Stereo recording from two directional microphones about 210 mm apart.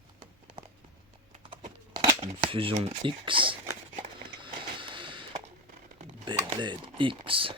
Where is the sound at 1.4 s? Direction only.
25° right (ahead or behind).